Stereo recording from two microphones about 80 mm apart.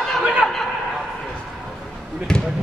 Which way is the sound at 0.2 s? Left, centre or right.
Centre.